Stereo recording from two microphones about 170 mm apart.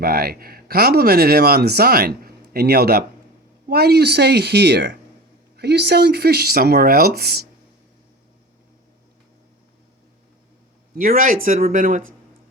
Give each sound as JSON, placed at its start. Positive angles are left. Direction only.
{"t": 0.0, "sound": "speech", "side_deg": -65}
{"t": 10.9, "sound": "speech", "side_deg": -50}